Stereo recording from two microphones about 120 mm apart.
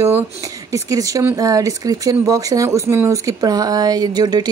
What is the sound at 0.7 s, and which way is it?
Speech, 25° right (ahead or behind).